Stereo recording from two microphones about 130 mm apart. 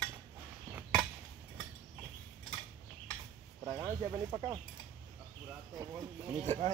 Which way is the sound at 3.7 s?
20° right (ahead or behind).